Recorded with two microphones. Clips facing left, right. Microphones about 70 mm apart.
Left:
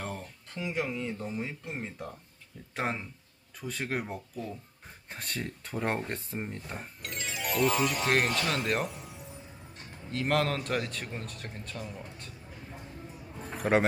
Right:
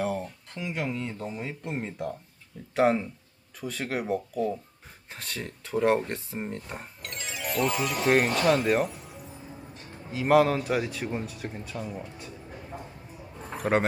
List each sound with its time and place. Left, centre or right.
0.0 s speech: centre
5.1 s a man's voice: centre
13.6 s speech: centre